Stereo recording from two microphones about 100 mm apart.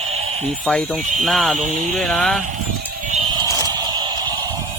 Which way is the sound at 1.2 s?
5° left (ahead or behind).